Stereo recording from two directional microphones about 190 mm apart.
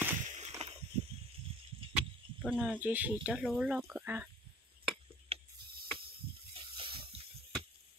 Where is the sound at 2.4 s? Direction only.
Centre (ahead or behind).